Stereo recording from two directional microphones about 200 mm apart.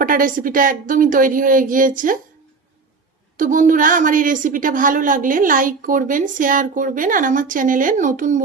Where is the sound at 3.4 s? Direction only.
40° right (ahead or behind).